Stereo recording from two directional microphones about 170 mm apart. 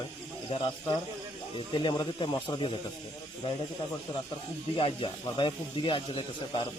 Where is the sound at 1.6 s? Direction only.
25° left (ahead or behind).